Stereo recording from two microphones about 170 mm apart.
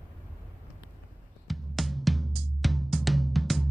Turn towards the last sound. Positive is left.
turn(degrees=0)  # may be behind; listen again after turning